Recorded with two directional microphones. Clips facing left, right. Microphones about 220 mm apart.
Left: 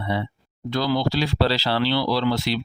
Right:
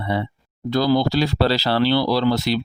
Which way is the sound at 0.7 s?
40° right (ahead or behind).